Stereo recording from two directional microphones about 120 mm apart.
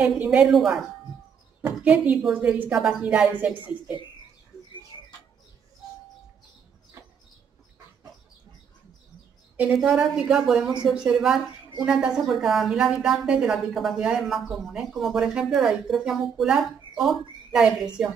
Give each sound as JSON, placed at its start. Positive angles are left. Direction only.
{"t": 0.2, "sound": "a woman's voice", "side_deg": -10}
{"t": 4.9, "sound": "bird", "side_deg": 45}
{"t": 9.8, "sound": "a woman's voice", "side_deg": -5}